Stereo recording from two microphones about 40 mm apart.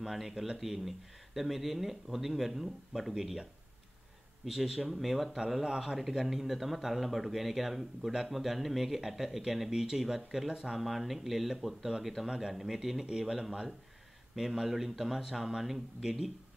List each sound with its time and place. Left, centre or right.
0.0 s speech: centre
4.5 s speech: centre
5.9 s speech: centre
12.3 s speech: centre